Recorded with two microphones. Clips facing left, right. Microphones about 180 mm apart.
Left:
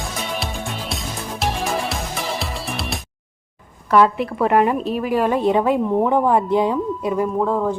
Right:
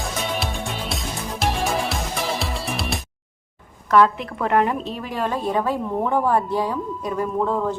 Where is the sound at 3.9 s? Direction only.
10° left (ahead or behind).